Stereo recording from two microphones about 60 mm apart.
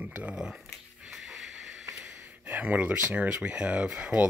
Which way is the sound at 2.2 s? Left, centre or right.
Right.